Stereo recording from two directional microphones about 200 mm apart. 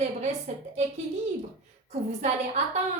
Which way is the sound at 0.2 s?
35° right (ahead or behind).